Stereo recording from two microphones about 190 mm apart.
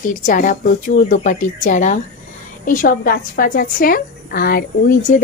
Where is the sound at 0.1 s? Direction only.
45° left (ahead or behind).